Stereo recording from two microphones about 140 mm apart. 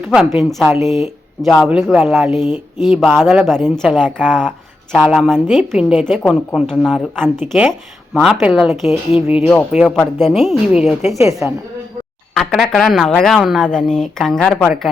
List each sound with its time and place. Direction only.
0.1 s speech: 5° right (ahead or behind)
9.2 s speech: 15° right (ahead or behind)
9.8 s speech: centre (ahead or behind)
11.4 s speech: 15° right (ahead or behind)
12.3 s speech: centre (ahead or behind)